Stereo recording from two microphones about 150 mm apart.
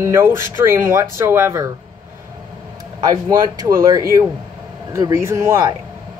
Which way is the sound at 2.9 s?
25° right (ahead or behind).